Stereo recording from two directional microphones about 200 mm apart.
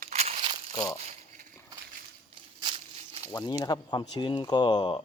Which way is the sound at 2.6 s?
25° right (ahead or behind).